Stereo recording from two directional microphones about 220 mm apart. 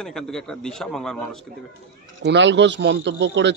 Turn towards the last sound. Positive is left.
turn(degrees=-55)  # may be behind; listen again after turning